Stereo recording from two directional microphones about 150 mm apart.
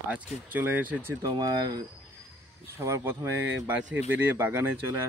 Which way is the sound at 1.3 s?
25° right (ahead or behind).